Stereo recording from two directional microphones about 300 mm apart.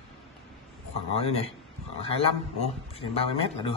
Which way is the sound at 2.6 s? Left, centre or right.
Centre.